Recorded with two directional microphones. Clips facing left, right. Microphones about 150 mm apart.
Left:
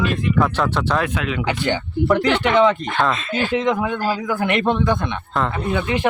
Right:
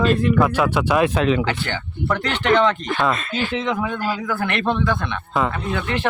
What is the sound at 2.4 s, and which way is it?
A man's voice, 5° left (ahead or behind).